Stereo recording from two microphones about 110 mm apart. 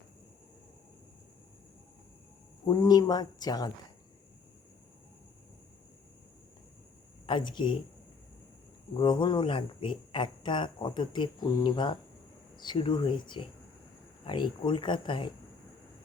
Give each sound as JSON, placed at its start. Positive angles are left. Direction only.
{"t": 2.6, "sound": "speech", "side_deg": 40}
{"t": 7.3, "sound": "speech", "side_deg": 45}
{"t": 9.0, "sound": "speech", "side_deg": 45}